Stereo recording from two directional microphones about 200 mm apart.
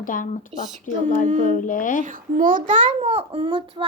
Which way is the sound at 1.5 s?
40° left (ahead or behind).